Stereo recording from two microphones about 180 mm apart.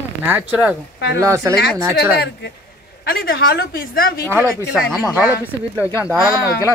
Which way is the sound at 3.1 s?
55° left (ahead or behind).